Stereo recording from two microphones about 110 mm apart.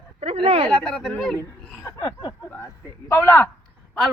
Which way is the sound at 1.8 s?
35° left (ahead or behind).